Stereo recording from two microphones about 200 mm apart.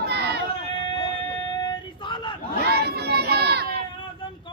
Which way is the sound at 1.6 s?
25° left (ahead or behind).